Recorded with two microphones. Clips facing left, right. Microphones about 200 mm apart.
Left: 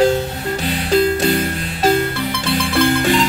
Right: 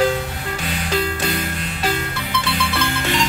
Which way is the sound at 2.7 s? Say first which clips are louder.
Left 8 dB; 50° left (ahead or behind).